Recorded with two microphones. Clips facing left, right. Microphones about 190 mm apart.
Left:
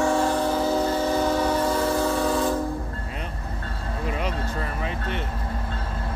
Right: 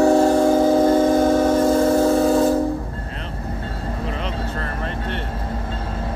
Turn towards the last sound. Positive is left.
turn(degrees=5)  # may be behind; listen again after turning